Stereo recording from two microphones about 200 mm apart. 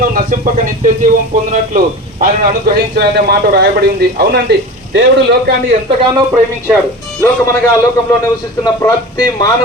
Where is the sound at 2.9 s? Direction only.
55° right (ahead or behind).